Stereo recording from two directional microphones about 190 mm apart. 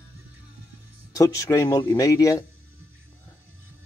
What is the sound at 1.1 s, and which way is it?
Speech, 15° left (ahead or behind).